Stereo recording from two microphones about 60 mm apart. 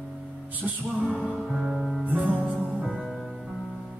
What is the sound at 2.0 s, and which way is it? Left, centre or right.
Music, right.